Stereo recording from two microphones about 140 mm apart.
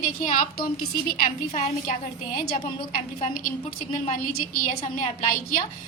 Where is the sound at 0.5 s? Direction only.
90° left.